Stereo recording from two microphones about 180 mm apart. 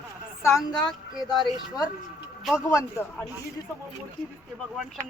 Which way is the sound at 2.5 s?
15° left (ahead or behind).